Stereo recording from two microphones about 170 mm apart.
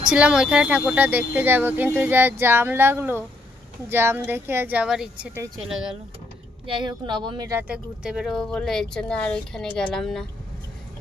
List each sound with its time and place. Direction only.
0.1 s speech: 5° right (ahead or behind)
6.6 s speech: 30° right (ahead or behind)
7.5 s speech: 5° right (ahead or behind)